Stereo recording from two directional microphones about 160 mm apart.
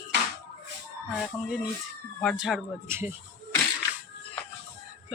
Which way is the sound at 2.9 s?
15° right (ahead or behind).